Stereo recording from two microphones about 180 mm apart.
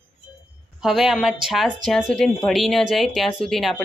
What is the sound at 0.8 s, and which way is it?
A woman's voice, centre (ahead or behind).